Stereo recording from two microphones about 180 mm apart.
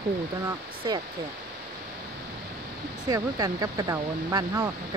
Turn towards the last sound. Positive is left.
turn(degrees=-20)  # may be behind; listen again after turning